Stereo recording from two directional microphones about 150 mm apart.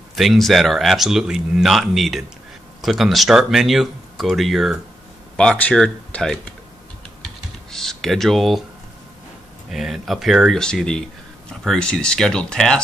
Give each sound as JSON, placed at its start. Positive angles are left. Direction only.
{"t": 0.1, "sound": "speech", "side_deg": 0}
{"t": 7.7, "sound": "speech", "side_deg": 5}
{"t": 9.7, "sound": "speech", "side_deg": 0}